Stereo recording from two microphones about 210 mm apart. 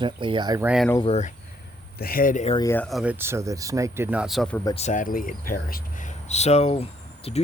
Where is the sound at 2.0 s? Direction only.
45° left (ahead or behind).